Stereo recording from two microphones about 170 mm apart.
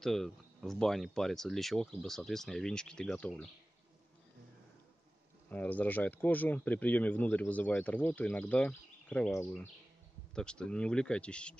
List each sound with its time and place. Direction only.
0.0 s speech: centre (ahead or behind)
5.5 s speech: 10° left (ahead or behind)
10.3 s speech: 5° left (ahead or behind)